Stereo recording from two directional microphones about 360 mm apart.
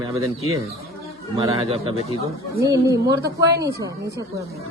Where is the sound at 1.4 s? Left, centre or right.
Centre.